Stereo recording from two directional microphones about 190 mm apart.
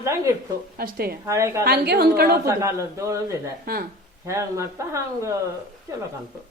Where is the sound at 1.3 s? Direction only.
15° right (ahead or behind).